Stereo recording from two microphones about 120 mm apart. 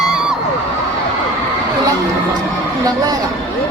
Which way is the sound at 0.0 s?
5° right (ahead or behind).